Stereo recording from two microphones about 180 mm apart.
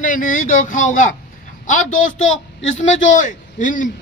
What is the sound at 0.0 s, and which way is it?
A man's voice, 45° left (ahead or behind).